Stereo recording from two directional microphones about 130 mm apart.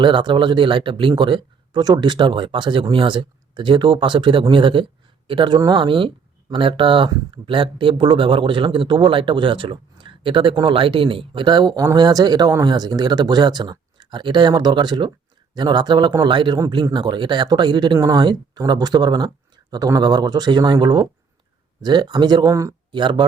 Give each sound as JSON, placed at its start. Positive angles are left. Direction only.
{"t": 0.0, "sound": "speech", "side_deg": -40}
{"t": 22.9, "sound": "speech", "side_deg": -40}